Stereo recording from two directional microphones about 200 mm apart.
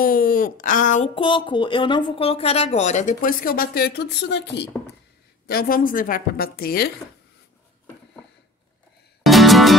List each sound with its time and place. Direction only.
0.0 s speech: 45° left (ahead or behind)
1.1 s speech: 25° left (ahead or behind); by 4.6 s 60° left (ahead or behind)
5.5 s a woman's voice: 45° left (ahead or behind)
9.2 s music: centre (ahead or behind)